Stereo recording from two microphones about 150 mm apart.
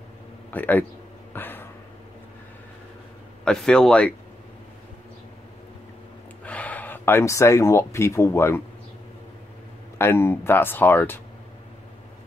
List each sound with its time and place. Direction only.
0.5 s speech: 10° left (ahead or behind)
1.3 s a sound: 15° left (ahead or behind)
3.4 s speech: 5° left (ahead or behind)
6.4 s speech: 10° left (ahead or behind)
9.9 s speech: 15° left (ahead or behind)